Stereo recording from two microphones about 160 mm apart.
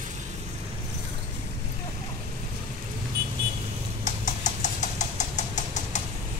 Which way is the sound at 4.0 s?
50° left (ahead or behind).